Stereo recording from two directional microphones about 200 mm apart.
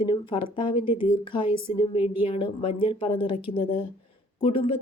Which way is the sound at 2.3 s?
25° left (ahead or behind).